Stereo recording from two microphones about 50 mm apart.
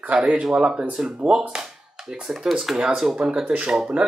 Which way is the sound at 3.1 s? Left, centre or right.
Centre.